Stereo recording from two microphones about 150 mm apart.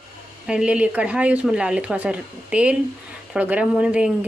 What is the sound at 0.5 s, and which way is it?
Speech, 5° right (ahead or behind).